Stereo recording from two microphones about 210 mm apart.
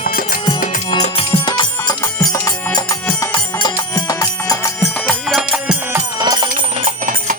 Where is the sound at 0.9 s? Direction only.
25° left (ahead or behind); by 6.0 s 5° right (ahead or behind).